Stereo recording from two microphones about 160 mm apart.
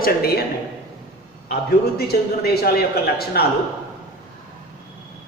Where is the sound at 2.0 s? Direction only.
75° left (ahead or behind).